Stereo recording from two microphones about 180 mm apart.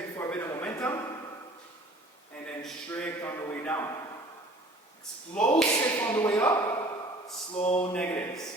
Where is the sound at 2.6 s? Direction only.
5° left (ahead or behind).